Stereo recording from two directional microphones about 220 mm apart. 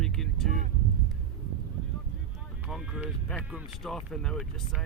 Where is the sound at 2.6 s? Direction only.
Centre (ahead or behind).